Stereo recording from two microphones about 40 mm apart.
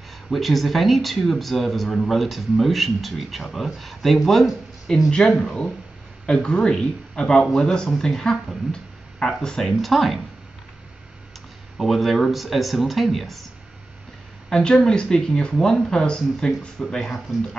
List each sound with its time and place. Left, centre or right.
0.3 s speech: centre
5.4 s speech: centre
9.2 s speech: centre
11.8 s speech: centre
14.5 s speech: centre